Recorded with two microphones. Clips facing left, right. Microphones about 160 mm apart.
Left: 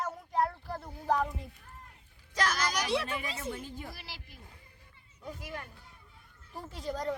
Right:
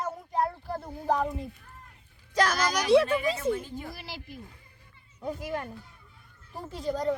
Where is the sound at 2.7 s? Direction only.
40° right (ahead or behind).